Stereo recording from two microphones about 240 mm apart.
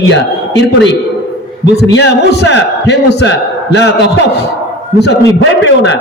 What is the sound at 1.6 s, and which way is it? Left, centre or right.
A man's voice, left.